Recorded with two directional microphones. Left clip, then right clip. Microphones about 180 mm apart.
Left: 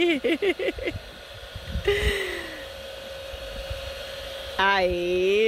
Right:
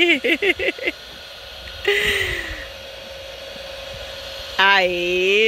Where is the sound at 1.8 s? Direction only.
15° left (ahead or behind).